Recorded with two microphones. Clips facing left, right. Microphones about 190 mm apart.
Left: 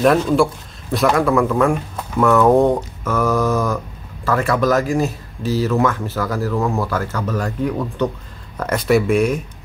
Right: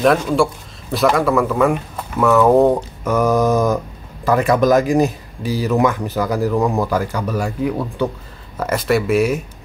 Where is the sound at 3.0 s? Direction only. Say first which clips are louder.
Right 3 dB; 15° right (ahead or behind).